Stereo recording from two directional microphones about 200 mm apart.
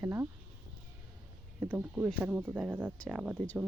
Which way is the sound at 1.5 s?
10° right (ahead or behind).